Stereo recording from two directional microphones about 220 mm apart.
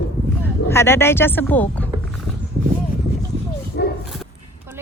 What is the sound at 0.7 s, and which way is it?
Speech, 10° left (ahead or behind).